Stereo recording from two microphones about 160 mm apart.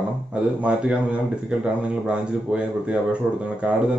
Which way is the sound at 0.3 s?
10° right (ahead or behind).